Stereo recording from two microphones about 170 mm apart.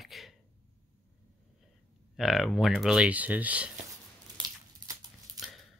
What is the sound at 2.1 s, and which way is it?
Speech, centre (ahead or behind).